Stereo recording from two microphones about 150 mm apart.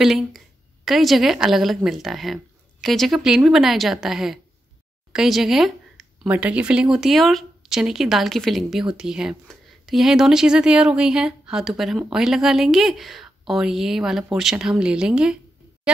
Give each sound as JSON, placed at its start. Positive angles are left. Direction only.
{"t": 0.0, "sound": "speech", "side_deg": 0}